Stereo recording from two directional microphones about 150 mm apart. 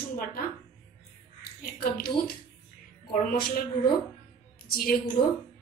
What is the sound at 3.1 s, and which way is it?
Speech, 70° left (ahead or behind).